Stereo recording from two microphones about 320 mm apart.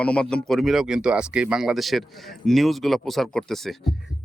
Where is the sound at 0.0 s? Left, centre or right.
Centre.